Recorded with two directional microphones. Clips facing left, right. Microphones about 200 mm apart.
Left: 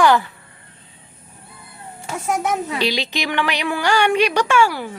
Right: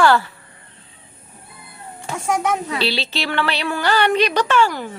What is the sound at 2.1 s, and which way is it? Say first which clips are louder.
Speech: right 1 dB; 5° left (ahead or behind).